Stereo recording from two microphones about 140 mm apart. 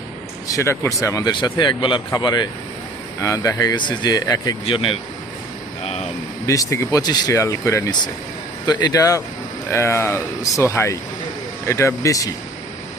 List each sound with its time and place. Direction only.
0.4 s speech: 20° left (ahead or behind)
4.6 s speech: 40° left (ahead or behind)
6.4 s speech: 25° left (ahead or behind)